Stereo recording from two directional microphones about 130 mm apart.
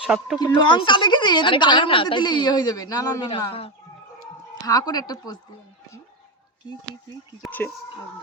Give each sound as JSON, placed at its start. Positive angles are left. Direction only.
{"t": 0.0, "sound": "speech", "side_deg": -5}
{"t": 0.3, "sound": "speech", "side_deg": 35}
{"t": 4.6, "sound": "speech", "side_deg": 30}